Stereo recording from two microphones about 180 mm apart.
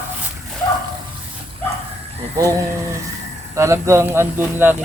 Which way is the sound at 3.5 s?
15° right (ahead or behind).